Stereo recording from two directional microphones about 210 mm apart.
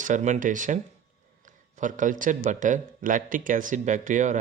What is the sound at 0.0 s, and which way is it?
Speech, 35° right (ahead or behind).